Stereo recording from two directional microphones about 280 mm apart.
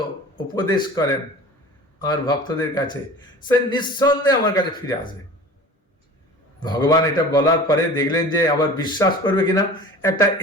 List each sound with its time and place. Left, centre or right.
0.4 s a man's voice: centre
6.6 s a man's voice: centre